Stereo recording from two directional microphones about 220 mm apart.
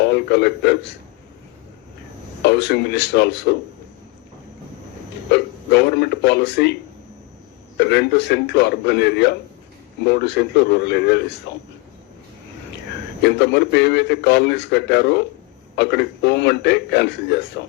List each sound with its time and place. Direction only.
0.0 s a man's voice: 50° left (ahead or behind)
2.4 s a man's voice: 50° left (ahead or behind)
5.3 s a man's voice: 50° left (ahead or behind)
7.8 s a man's voice: 50° left (ahead or behind)
13.2 s a man's voice: 50° left (ahead or behind)